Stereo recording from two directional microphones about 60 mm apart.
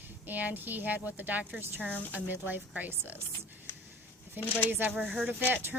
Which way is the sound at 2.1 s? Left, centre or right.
Right.